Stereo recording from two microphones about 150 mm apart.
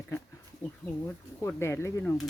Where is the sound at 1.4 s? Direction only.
15° left (ahead or behind).